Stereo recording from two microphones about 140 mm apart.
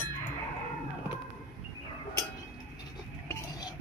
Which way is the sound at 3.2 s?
25° left (ahead or behind).